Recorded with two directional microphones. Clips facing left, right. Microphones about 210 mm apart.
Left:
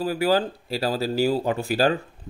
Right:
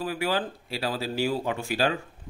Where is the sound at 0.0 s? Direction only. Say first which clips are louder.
Left 6 dB; 35° left (ahead or behind).